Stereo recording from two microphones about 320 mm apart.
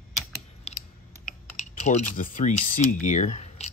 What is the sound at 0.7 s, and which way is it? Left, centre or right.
Typing, centre.